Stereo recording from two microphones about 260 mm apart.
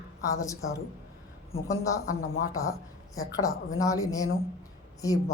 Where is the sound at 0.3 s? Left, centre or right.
Centre.